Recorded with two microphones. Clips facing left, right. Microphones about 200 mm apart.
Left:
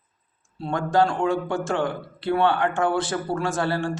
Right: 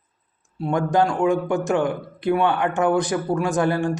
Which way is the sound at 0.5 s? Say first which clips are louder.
Right 2 dB; 15° right (ahead or behind).